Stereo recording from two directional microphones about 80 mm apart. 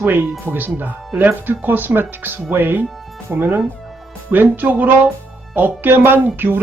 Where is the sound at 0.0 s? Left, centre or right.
Right.